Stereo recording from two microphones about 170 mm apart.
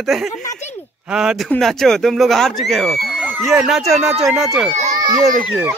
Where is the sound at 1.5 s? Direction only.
Centre (ahead or behind).